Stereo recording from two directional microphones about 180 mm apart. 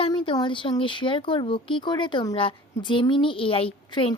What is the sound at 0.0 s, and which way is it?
Speech, 30° left (ahead or behind).